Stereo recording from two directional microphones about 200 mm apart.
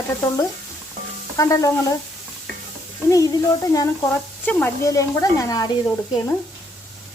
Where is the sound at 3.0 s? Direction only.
15° left (ahead or behind).